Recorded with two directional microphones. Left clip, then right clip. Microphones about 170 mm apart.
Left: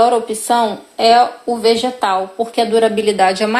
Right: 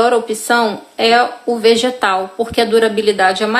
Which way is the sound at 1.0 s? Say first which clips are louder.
Left 1 dB; 35° right (ahead or behind).